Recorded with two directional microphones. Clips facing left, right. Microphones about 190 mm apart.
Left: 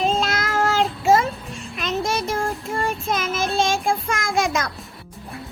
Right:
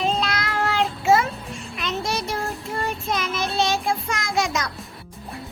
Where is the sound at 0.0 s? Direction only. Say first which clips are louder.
Left 2 dB; 45° left (ahead or behind).